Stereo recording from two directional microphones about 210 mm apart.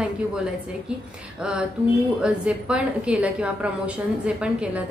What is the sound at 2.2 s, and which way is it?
A woman's voice, 5° right (ahead or behind).